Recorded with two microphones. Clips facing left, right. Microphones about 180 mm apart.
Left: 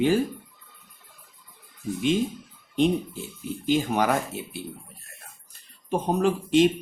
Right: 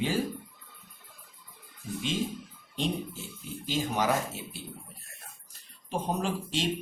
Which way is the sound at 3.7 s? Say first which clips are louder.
Left 6 dB; 55° left (ahead or behind).